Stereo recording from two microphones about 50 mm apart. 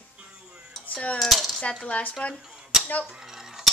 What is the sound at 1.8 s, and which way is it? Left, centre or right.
Speech, left.